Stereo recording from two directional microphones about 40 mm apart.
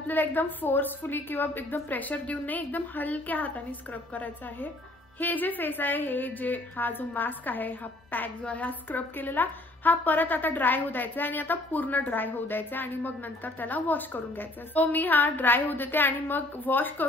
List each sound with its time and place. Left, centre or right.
0.0 s a woman's voice: left
8.5 s a woman's voice: left